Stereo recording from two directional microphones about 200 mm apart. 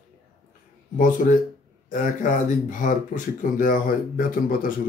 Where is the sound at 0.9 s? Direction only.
40° left (ahead or behind).